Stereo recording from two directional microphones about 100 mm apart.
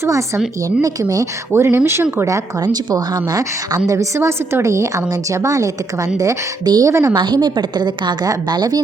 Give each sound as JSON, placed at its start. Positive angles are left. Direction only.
{"t": 0.0, "sound": "a woman's voice", "side_deg": -30}
{"t": 1.5, "sound": "speech", "side_deg": -25}
{"t": 2.9, "sound": "a woman's voice", "side_deg": -35}
{"t": 7.1, "sound": "a woman's voice", "side_deg": -45}